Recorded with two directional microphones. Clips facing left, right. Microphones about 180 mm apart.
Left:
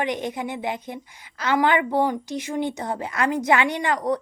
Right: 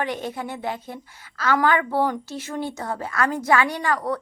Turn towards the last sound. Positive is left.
turn(degrees=20)  # may be behind; listen again after turning